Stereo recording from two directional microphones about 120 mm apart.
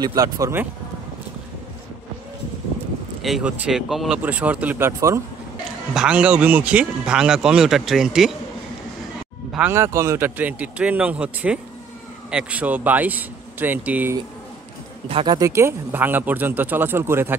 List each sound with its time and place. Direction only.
0.0 s speech: 30° right (ahead or behind)
3.2 s speech: centre (ahead or behind); by 5.2 s 20° right (ahead or behind)
5.9 s speech: 10° right (ahead or behind)
9.7 s speech: 25° right (ahead or behind)
15.2 s speech: 30° right (ahead or behind)